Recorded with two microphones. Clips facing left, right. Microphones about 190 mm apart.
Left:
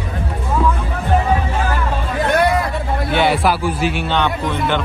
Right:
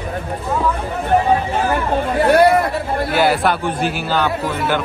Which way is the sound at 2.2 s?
30° right (ahead or behind).